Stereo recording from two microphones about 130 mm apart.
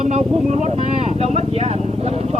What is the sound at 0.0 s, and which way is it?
Vehicle, 55° right (ahead or behind).